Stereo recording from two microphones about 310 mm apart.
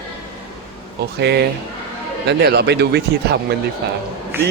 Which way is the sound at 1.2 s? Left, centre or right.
Right.